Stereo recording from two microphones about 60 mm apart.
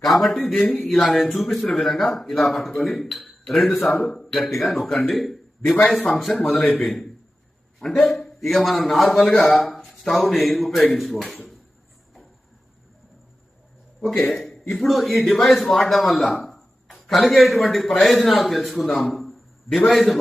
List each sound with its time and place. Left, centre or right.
0.0 s a man's voice: centre
0.9 s speech: centre
3.9 s speech: left
4.2 s a man's voice: centre
9.3 s speech: left
9.7 s speech: centre
14.2 s a man's voice: centre